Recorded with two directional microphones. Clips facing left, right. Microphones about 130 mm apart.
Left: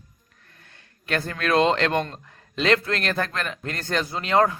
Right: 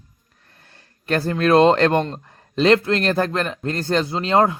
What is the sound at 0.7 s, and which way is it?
Speech, 35° right (ahead or behind).